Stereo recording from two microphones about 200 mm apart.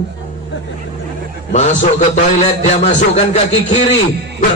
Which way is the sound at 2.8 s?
35° left (ahead or behind).